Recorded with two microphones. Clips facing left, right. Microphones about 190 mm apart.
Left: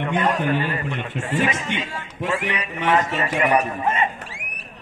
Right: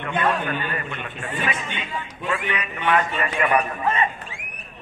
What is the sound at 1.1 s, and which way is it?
Speech, 90° left.